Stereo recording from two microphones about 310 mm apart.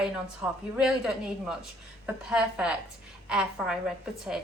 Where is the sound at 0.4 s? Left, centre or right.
Centre.